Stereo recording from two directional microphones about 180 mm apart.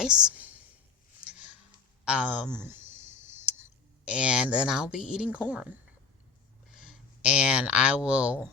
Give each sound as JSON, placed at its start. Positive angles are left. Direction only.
{"t": 0.0, "sound": "a woman's voice", "side_deg": -5}
{"t": 1.2, "sound": "a sound", "side_deg": -5}
{"t": 2.0, "sound": "clicking", "side_deg": -5}
{"t": 6.7, "sound": "speech", "side_deg": -5}